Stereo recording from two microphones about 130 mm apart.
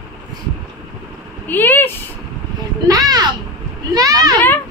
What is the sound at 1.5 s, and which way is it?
Speech, 15° left (ahead or behind).